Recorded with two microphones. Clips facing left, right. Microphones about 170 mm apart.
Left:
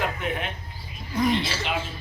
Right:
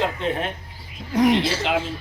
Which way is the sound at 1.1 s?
85° right.